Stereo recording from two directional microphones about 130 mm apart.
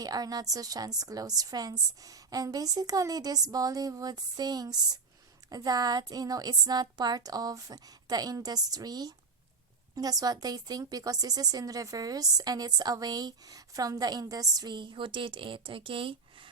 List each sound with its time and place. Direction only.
0.0 s a woman's voice: 30° right (ahead or behind)